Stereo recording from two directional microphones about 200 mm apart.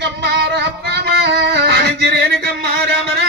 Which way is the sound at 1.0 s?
55° right (ahead or behind).